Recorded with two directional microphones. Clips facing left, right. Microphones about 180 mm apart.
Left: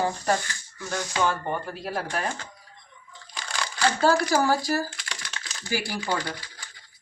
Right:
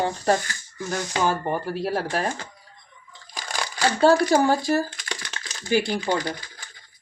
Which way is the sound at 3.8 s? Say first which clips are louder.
Right 4 dB; 25° right (ahead or behind).